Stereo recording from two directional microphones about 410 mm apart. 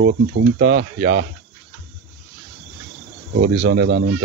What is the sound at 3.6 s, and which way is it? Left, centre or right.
Speech, right.